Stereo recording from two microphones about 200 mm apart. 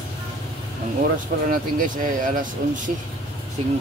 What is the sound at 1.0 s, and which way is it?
Speech, 45° right (ahead or behind).